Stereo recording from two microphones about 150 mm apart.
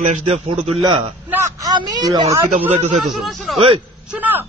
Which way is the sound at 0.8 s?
30° right (ahead or behind).